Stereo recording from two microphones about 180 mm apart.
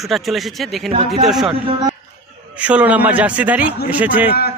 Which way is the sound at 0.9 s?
40° right (ahead or behind).